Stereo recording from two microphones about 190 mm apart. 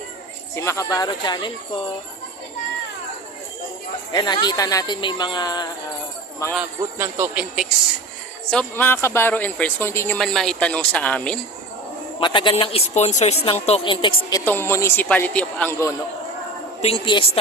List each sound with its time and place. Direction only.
0.5 s speech: 15° left (ahead or behind)
4.1 s speech: 20° left (ahead or behind)
6.5 s a man's voice: 10° right (ahead or behind)
8.4 s speech: 10° left (ahead or behind)
10.2 s a man's voice: 5° left (ahead or behind)
12.2 s speech: 25° left (ahead or behind)
14.3 s speech: 15° left (ahead or behind)
16.8 s speech: 30° left (ahead or behind)